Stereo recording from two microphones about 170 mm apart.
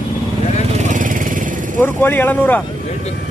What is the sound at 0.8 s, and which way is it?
Vehicle, 50° right (ahead or behind).